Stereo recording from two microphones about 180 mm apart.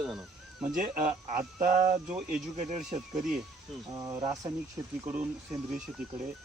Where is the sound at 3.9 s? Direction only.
20° right (ahead or behind).